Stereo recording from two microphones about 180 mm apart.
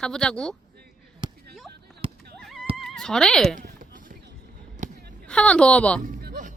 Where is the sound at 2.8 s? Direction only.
5° left (ahead or behind).